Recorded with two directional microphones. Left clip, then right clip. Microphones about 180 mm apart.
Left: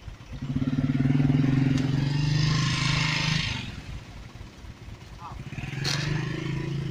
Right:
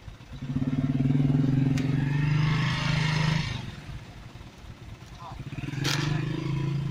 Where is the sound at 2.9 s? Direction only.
35° right (ahead or behind).